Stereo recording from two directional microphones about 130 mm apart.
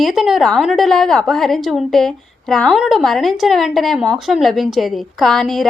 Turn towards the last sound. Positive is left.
turn(degrees=5)  # may be behind; listen again after turning